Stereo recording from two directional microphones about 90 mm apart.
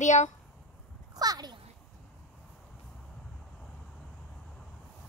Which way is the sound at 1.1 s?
45° right (ahead or behind).